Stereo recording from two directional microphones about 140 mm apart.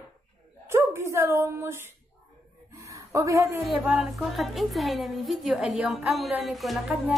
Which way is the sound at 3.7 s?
5° right (ahead or behind).